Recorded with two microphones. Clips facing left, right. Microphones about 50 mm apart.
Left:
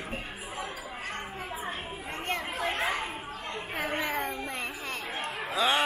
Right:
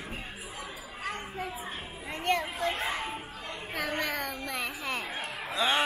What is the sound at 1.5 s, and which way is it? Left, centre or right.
Children playing, left.